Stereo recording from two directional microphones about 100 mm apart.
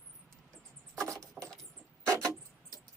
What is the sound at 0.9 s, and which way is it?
Rodents, 30° right (ahead or behind).